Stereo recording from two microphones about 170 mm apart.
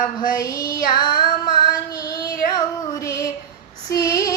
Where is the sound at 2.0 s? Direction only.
20° left (ahead or behind).